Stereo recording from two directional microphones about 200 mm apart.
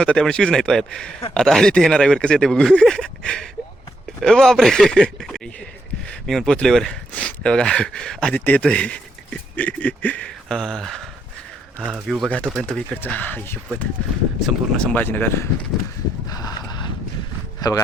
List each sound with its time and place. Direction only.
0.0 s speech: 5° left (ahead or behind)
16.3 s a sound: 20° left (ahead or behind)
17.6 s speech: 20° left (ahead or behind)